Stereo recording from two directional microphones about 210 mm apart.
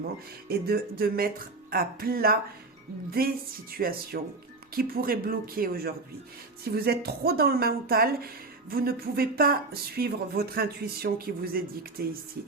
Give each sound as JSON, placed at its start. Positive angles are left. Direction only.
{"t": 0.0, "sound": "speech", "side_deg": -45}